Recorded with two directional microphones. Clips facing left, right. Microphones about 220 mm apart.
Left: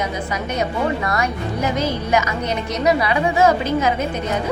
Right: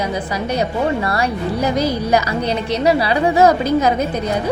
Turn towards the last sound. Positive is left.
turn(degrees=-40)  # may be behind; listen again after turning